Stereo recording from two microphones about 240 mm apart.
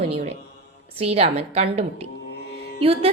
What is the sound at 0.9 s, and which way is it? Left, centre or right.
A woman's voice, right.